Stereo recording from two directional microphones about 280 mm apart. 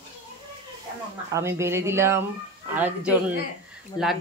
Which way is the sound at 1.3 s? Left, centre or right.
Centre.